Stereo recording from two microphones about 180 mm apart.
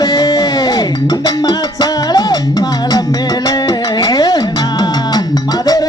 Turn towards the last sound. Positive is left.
turn(degrees=20)  # may be behind; listen again after turning